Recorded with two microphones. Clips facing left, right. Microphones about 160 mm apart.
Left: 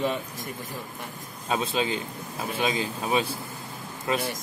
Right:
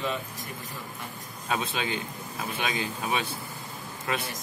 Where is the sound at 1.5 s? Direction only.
30° left (ahead or behind).